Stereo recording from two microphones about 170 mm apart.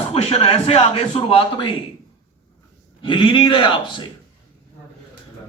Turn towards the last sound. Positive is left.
turn(degrees=30)  # may be behind; listen again after turning